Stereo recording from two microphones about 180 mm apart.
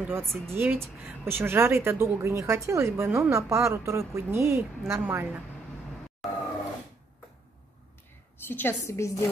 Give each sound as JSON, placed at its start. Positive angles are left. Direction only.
{"t": 0.0, "sound": "a woman's voice", "side_deg": -15}
{"t": 8.5, "sound": "a woman's voice", "side_deg": 10}